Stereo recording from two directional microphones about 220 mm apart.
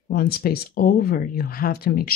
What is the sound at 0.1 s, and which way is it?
Speech, 45° left (ahead or behind).